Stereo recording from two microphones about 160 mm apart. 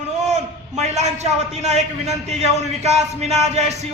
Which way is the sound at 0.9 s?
45° right (ahead or behind).